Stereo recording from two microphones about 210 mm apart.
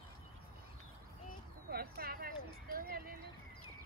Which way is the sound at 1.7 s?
45° right (ahead or behind).